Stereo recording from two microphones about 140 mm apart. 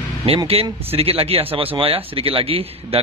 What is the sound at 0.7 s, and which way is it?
A man's voice, 45° right (ahead or behind).